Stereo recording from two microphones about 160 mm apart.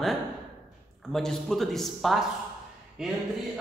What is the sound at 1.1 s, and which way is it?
A man's voice, centre (ahead or behind).